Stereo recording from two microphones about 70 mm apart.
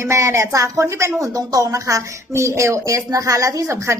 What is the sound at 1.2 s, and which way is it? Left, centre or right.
A woman's voice, right.